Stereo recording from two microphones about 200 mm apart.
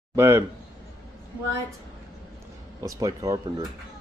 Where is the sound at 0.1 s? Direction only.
10° right (ahead or behind).